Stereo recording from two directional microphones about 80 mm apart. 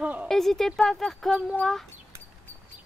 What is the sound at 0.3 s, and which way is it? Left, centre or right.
A woman's voice, centre.